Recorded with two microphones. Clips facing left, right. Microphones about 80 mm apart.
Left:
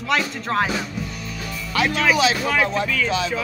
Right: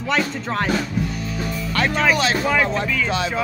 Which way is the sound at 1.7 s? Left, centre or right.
Centre.